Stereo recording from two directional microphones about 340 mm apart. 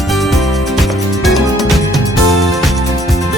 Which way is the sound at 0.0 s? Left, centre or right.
Centre.